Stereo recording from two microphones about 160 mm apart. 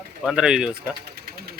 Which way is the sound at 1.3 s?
75° right (ahead or behind).